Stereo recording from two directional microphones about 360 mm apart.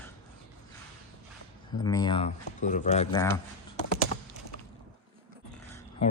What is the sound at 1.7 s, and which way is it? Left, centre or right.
Speech, centre.